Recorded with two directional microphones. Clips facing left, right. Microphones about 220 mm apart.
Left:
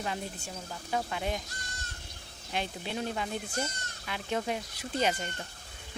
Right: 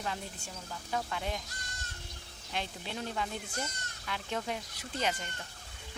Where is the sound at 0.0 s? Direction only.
15° left (ahead or behind).